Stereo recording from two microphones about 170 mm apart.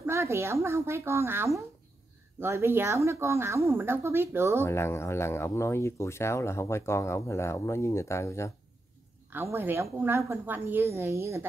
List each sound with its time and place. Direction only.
0.0 s a woman's voice: 15° right (ahead or behind)
4.6 s speech: 15° left (ahead or behind)
9.3 s a woman's voice: 15° right (ahead or behind)